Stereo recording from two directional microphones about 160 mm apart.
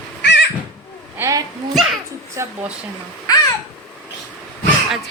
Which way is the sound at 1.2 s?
20° right (ahead or behind).